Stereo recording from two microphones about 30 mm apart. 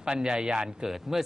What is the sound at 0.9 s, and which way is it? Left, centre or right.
Speech, centre.